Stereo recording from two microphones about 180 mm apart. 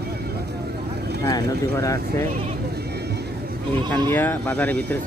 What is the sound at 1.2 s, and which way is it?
Speech, 15° left (ahead or behind).